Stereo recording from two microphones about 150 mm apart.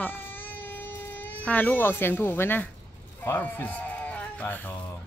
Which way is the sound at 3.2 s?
10° left (ahead or behind).